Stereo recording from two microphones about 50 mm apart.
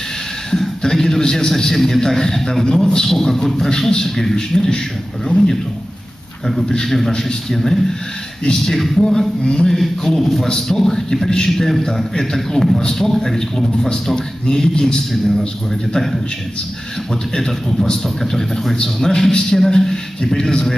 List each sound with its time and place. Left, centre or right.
0.5 s a man's voice: centre
6.7 s a man's voice: centre
7.5 s a man's voice: centre
9.4 s a man's voice: centre
9.7 s a man's voice: centre
17.4 s a man's voice: centre